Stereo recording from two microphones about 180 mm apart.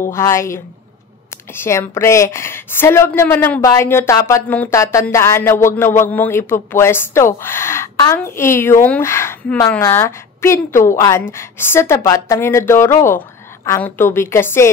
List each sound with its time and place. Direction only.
0.1 s speech: 15° left (ahead or behind)